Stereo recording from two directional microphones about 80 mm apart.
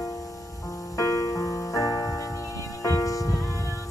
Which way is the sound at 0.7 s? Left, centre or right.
Left.